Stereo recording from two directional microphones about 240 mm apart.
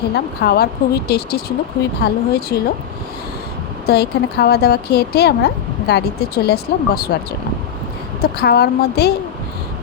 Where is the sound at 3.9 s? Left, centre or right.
Left.